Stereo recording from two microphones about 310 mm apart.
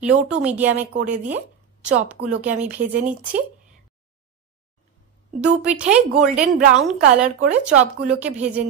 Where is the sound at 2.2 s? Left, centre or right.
Right.